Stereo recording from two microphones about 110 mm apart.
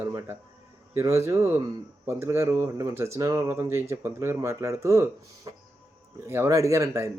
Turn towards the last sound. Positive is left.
turn(degrees=-30)  # may be behind; listen again after turning